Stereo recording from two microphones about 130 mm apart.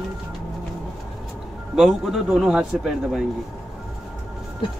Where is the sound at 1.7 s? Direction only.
Centre (ahead or behind).